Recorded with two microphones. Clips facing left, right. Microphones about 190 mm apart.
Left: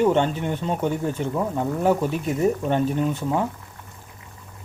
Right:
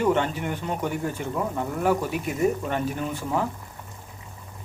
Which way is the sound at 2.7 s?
20° left (ahead or behind).